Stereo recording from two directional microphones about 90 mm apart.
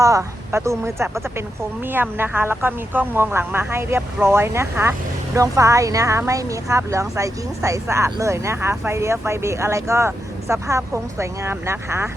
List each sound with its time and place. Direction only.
0.0 s speech: 35° right (ahead or behind)